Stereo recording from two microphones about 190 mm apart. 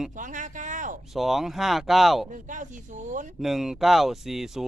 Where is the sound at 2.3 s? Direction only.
40° right (ahead or behind).